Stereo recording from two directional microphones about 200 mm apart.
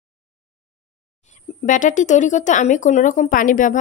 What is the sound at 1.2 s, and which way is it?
Speech, 40° left (ahead or behind).